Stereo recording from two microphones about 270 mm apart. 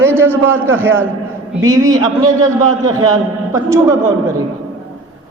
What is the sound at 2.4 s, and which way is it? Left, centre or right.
Speech, right.